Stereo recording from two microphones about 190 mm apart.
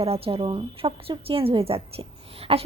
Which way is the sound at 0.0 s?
30° right (ahead or behind).